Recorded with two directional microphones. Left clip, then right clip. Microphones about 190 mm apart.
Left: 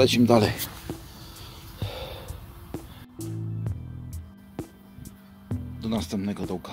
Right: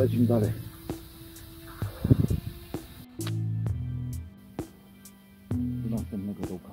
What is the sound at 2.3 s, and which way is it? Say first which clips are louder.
Music: right 3 dB; centre (ahead or behind).